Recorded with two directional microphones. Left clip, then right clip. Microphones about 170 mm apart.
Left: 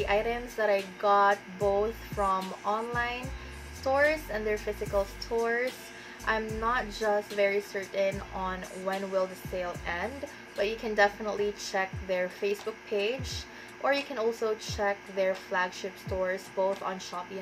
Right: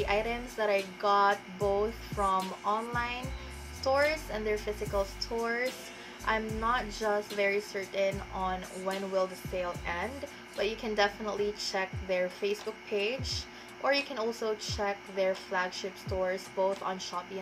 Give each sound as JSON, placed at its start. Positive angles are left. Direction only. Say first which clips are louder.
{"t": 0.0, "sound": "a woman's voice", "louder": "left 2 dB", "side_deg": -5}